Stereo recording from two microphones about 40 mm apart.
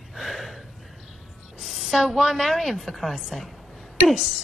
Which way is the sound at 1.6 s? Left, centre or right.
Centre.